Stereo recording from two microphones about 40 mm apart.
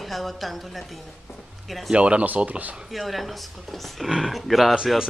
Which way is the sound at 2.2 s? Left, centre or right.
Right.